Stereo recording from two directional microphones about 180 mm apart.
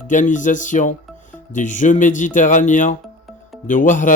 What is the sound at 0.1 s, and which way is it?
Speech, 45° left (ahead or behind).